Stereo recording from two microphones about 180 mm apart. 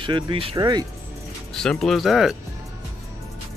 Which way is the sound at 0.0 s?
30° right (ahead or behind).